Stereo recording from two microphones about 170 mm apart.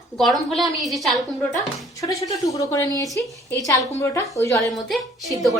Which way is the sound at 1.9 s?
20° left (ahead or behind).